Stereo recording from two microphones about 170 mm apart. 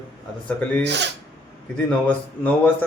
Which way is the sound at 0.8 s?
90° right.